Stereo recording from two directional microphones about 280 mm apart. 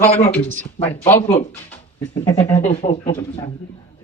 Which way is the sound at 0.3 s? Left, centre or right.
Centre.